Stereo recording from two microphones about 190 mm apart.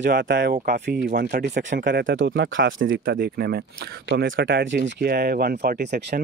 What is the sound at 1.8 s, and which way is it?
Speech, 70° right (ahead or behind).